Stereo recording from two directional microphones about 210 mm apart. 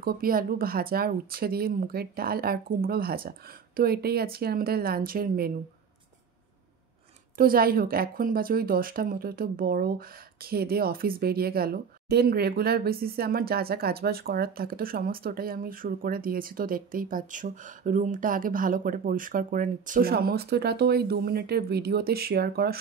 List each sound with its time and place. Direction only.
0.0 s a woman's voice: 45° right (ahead or behind)
7.3 s a woman's voice: 45° right (ahead or behind)